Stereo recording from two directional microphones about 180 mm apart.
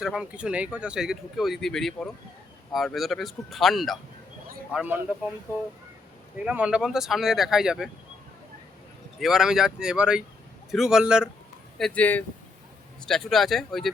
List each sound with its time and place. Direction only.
0.0 s speech: 5° right (ahead or behind)
6.4 s speech: 5° right (ahead or behind)
9.2 s speech: centre (ahead or behind)
11.8 s speech: 10° left (ahead or behind)